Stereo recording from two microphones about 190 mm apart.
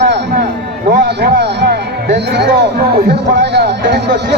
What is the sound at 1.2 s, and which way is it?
Speech, 60° right (ahead or behind).